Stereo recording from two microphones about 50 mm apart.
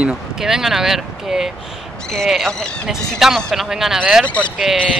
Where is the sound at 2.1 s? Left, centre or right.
Centre.